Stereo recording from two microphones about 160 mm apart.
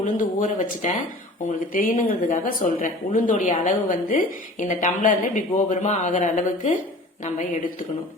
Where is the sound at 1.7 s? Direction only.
60° left (ahead or behind).